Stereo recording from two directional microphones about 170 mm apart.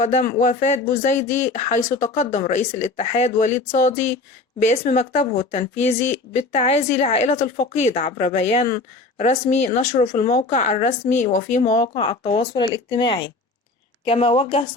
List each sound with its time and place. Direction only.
0.0 s speech: 45° left (ahead or behind)
11.9 s speech: 30° left (ahead or behind)